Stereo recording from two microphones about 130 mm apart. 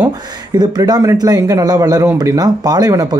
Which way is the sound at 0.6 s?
30° right (ahead or behind).